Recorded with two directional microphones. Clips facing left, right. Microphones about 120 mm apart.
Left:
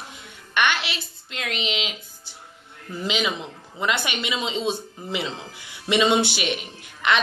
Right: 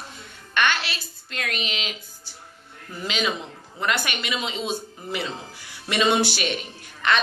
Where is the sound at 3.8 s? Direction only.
20° left (ahead or behind).